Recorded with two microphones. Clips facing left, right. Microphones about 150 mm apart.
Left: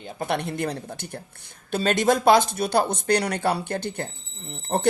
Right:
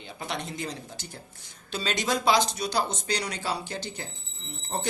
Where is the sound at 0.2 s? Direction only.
60° left (ahead or behind).